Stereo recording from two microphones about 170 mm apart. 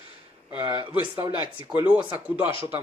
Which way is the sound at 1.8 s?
10° right (ahead or behind).